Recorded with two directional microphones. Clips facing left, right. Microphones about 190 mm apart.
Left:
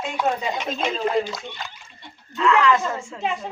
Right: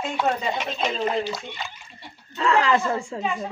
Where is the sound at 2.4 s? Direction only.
35° right (ahead or behind).